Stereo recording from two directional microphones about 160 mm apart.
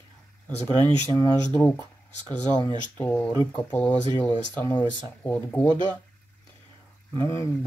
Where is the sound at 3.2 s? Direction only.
25° left (ahead or behind).